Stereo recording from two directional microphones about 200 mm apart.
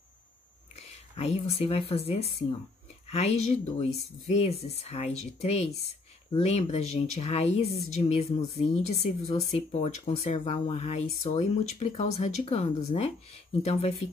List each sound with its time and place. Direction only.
0.7 s speech: 30° left (ahead or behind)